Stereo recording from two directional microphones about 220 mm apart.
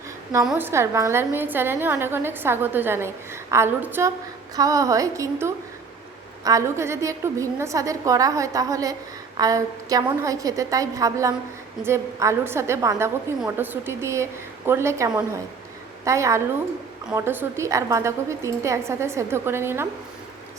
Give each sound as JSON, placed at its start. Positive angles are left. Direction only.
{"t": 0.4, "sound": "a woman's voice", "side_deg": -10}